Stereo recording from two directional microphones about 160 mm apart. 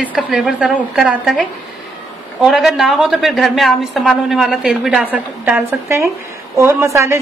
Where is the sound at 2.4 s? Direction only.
Centre (ahead or behind); by 7.2 s 20° right (ahead or behind).